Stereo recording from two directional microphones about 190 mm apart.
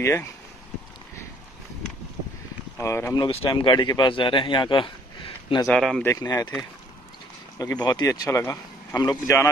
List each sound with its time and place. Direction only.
0.0 s speech: 15° left (ahead or behind)
2.8 s speech: 15° left (ahead or behind)
3.3 s a man's voice: 30° left (ahead or behind)
5.7 s speech: centre (ahead or behind)
6.0 s speech: 20° left (ahead or behind)
7.5 s speech: 20° left (ahead or behind)